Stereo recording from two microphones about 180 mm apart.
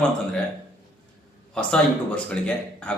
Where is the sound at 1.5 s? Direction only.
5° left (ahead or behind).